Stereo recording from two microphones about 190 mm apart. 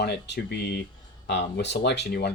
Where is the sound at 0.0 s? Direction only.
60° left (ahead or behind).